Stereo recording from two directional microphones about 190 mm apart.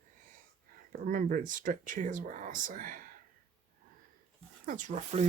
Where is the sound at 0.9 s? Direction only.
45° right (ahead or behind).